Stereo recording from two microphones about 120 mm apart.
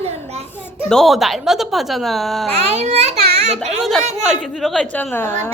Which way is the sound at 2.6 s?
60° right (ahead or behind).